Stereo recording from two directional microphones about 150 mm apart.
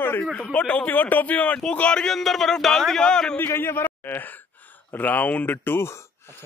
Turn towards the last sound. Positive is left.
turn(degrees=15)  # may be behind; listen again after turning